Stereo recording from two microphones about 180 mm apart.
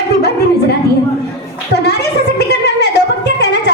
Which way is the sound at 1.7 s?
70° left (ahead or behind).